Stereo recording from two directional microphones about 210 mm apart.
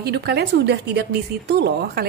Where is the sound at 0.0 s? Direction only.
50° right (ahead or behind).